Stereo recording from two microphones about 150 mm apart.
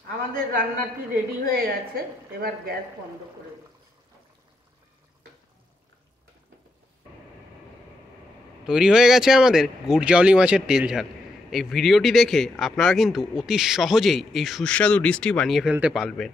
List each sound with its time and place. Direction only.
0.3 s a man's voice: 75° right (ahead or behind)
2.0 s a woman's voice: 90° right
8.6 s speech: 5° right (ahead or behind)